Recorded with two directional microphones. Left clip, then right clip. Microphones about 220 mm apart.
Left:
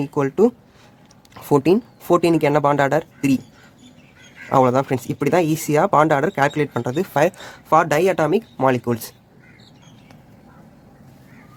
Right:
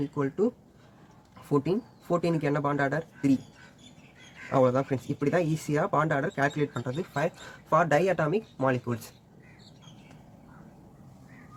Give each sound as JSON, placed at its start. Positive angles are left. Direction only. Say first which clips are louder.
{"t": 0.1, "sound": "speech", "louder": "left 14 dB", "side_deg": 40}
{"t": 1.5, "sound": "speech", "louder": "left 11 dB", "side_deg": 45}
{"t": 4.4, "sound": "speech", "louder": "left 8 dB", "side_deg": 40}